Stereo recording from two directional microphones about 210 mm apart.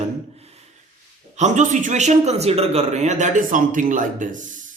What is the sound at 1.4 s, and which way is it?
A man's voice, 35° right (ahead or behind).